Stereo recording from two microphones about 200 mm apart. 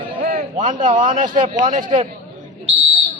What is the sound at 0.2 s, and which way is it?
A man's voice, 45° right (ahead or behind).